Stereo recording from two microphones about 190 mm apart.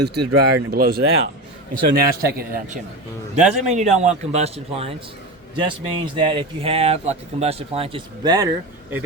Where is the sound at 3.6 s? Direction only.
35° right (ahead or behind).